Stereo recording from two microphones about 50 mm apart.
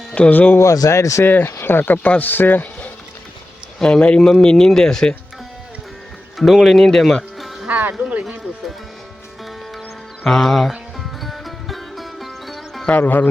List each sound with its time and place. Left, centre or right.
0.3 s speech: left
0.6 s speech: left
1.2 s speech: left
1.5 s speech: left
2.0 s speech: left
3.8 s speech: centre
6.3 s speech: centre
7.7 s speech: right
10.2 s speech: centre
10.7 s music: centre
13.0 s speech: left